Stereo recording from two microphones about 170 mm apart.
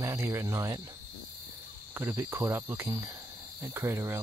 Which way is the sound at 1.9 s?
15° right (ahead or behind).